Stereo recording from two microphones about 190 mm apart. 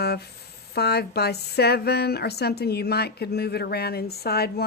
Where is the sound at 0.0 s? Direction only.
60° left (ahead or behind).